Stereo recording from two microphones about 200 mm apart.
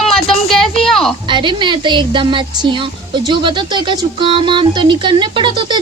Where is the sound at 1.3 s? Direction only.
25° right (ahead or behind).